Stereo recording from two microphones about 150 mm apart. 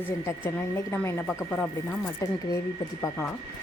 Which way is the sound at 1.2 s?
Centre (ahead or behind).